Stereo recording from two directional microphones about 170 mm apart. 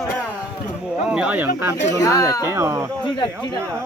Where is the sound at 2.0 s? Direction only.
20° left (ahead or behind).